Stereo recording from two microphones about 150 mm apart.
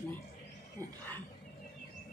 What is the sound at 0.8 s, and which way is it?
Speech, 20° right (ahead or behind).